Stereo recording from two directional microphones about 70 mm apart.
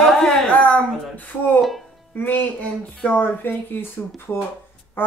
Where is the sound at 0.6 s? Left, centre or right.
Centre.